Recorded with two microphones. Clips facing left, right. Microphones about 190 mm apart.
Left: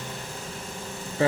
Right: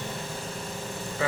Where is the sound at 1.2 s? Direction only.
35° left (ahead or behind).